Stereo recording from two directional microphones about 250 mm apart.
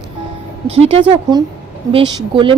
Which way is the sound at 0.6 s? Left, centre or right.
Right.